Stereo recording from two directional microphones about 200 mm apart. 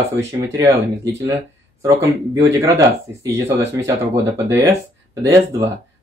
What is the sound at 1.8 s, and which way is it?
Speech, 15° right (ahead or behind).